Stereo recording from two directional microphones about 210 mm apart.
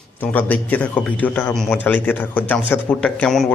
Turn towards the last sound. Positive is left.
turn(degrees=5)  # may be behind; listen again after turning